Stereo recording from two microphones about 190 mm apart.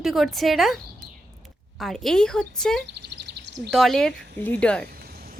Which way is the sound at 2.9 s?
60° right (ahead or behind).